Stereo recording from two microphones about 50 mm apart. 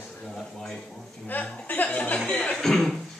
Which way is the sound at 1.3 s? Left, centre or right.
Left.